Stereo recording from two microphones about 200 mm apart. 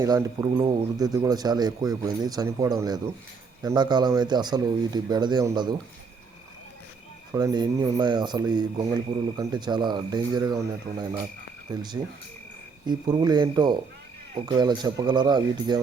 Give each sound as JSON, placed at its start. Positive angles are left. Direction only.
{"t": 0.0, "sound": "speech", "side_deg": -15}
{"t": 7.3, "sound": "speech", "side_deg": -20}